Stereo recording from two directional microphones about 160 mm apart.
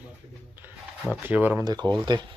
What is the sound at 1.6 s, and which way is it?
Speech, 25° right (ahead or behind).